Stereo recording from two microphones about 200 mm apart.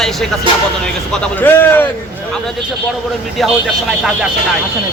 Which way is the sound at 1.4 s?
10° left (ahead or behind).